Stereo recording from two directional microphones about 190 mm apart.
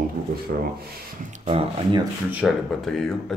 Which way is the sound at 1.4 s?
25° right (ahead or behind).